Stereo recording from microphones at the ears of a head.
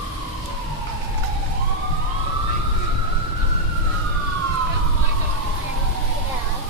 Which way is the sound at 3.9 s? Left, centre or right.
Right.